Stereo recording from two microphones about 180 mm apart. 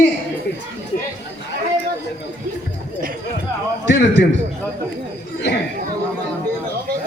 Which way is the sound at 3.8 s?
75° left (ahead or behind).